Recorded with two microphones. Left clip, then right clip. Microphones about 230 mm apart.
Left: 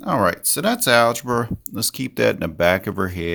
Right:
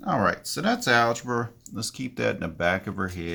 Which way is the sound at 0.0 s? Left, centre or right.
Left.